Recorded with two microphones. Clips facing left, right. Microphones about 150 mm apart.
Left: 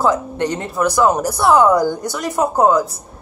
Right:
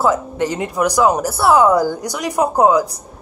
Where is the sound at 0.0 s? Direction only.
5° right (ahead or behind).